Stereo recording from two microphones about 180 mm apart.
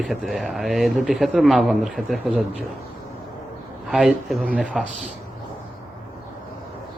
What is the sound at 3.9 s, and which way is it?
Speech, centre (ahead or behind).